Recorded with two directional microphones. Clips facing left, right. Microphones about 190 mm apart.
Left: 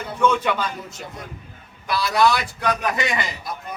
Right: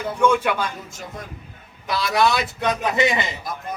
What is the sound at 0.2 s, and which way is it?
Speech, 10° right (ahead or behind).